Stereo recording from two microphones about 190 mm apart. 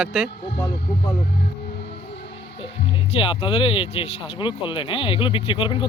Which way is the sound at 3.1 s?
30° left (ahead or behind).